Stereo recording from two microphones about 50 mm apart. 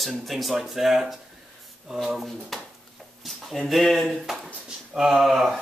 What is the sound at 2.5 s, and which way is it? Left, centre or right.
Speech, centre.